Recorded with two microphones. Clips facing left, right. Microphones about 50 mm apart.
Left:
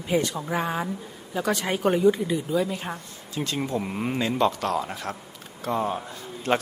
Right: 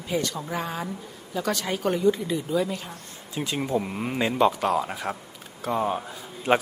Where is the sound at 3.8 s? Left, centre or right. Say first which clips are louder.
Left 2 dB; centre.